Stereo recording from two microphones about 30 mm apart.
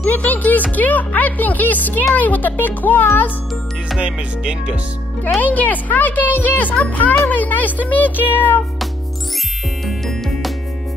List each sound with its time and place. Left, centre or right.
0.1 s speech: left
4.0 s music: right
5.4 s speech: left
8.3 s music: left